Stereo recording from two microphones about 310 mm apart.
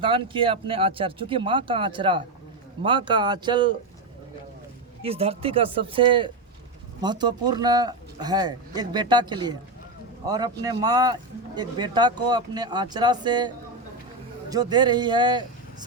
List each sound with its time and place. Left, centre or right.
0.0 s speech: centre
5.0 s speech: centre
14.5 s speech: centre